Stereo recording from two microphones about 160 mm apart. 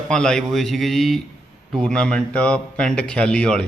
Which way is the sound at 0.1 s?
5° left (ahead or behind).